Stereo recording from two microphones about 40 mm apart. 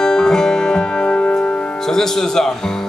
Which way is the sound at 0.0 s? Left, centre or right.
Centre.